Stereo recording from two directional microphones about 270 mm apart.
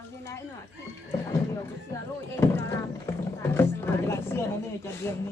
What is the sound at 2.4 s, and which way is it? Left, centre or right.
Speech, centre.